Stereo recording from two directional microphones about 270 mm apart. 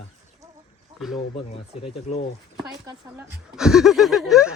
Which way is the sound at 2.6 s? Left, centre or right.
Centre.